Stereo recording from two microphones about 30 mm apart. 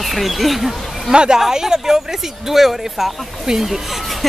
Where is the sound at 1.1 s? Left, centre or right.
Right.